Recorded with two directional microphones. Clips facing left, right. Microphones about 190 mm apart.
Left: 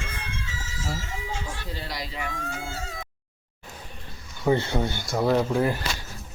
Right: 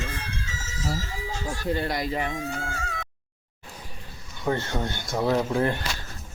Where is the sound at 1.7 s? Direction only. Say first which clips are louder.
Right 9 dB; 55° right (ahead or behind).